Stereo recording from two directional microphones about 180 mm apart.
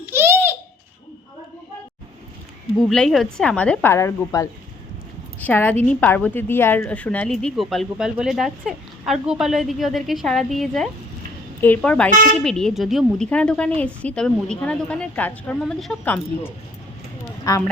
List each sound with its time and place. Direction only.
0.0 s baby laughter: 10° right (ahead or behind)
2.7 s a woman's voice: centre (ahead or behind)
17.5 s a woman's voice: 20° left (ahead or behind)